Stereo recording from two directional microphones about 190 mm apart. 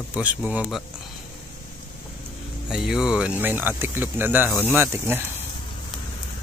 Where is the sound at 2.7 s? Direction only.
5° right (ahead or behind).